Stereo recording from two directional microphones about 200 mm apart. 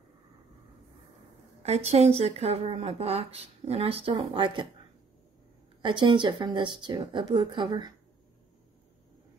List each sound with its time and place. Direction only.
1.6 s speech: 30° right (ahead or behind)
5.8 s speech: 25° right (ahead or behind)